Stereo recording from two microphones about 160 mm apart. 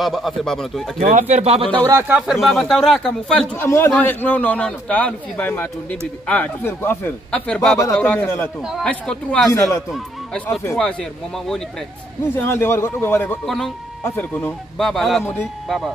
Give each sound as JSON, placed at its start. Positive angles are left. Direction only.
{"t": 0.0, "sound": "a man's voice", "side_deg": 0}
{"t": 0.9, "sound": "speech", "side_deg": -50}
{"t": 1.9, "sound": "speech", "side_deg": -15}
{"t": 2.4, "sound": "a man's voice", "side_deg": 0}
{"t": 3.5, "sound": "a man's voice", "side_deg": 15}
{"t": 9.5, "sound": "a man's voice", "side_deg": 20}
{"t": 12.4, "sound": "a man's voice", "side_deg": 15}
{"t": 14.8, "sound": "a man's voice", "side_deg": 0}